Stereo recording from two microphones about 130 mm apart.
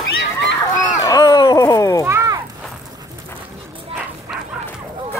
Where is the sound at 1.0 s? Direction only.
30° left (ahead or behind).